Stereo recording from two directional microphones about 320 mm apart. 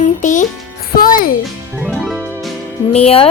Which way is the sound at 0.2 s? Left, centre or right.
Left.